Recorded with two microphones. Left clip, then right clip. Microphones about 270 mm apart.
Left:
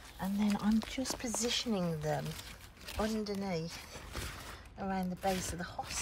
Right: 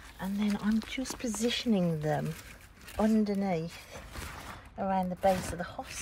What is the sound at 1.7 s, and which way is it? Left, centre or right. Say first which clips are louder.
Speech: right 5 dB; left.